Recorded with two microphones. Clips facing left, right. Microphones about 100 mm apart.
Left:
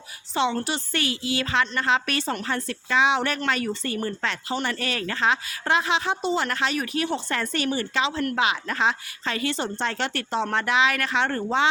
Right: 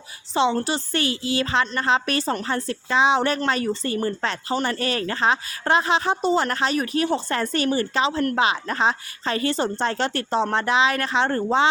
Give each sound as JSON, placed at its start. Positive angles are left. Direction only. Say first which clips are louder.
{"t": 0.3, "sound": "a woman's voice", "louder": "right 3 dB", "side_deg": -30}